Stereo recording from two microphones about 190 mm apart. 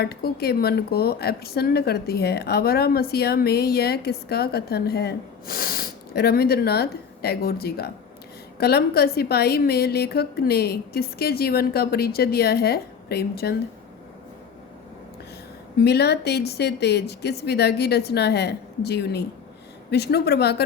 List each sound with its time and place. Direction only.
0.0 s a woman's voice: 55° left (ahead or behind)
15.8 s a woman's voice: 60° left (ahead or behind)